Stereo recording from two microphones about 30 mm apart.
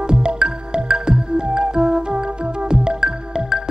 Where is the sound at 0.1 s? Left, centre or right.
Right.